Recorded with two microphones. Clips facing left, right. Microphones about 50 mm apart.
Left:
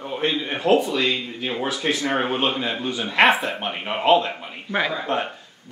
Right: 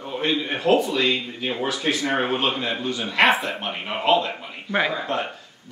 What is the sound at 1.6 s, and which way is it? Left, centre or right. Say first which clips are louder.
Speech: even; centre.